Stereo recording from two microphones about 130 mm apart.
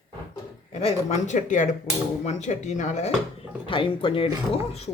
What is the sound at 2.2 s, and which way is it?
Speech, 60° left (ahead or behind).